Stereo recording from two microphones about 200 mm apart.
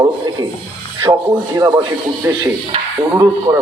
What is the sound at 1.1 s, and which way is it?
Speech, 25° right (ahead or behind).